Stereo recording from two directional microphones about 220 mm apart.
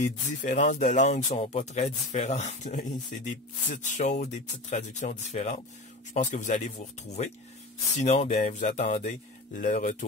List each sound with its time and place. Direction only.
0.0 s speech: 35° left (ahead or behind)
8.0 s speech: 30° left (ahead or behind)